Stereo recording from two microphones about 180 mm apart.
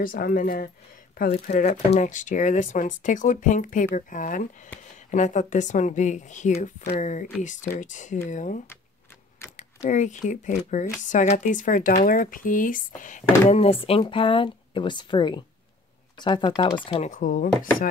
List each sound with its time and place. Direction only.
0.0 s speech: 55° left (ahead or behind)
9.6 s speech: 40° left (ahead or behind)
17.1 s speech: 45° left (ahead or behind)